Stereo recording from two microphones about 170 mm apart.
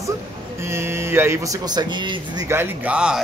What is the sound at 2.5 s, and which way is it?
Speech, 10° right (ahead or behind).